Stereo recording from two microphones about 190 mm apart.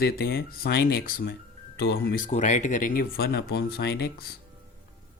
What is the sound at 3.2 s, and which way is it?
Speech, 60° left (ahead or behind).